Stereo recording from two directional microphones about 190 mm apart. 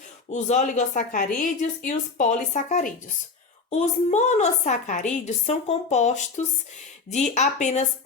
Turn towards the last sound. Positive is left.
turn(degrees=35)  # may be behind; listen again after turning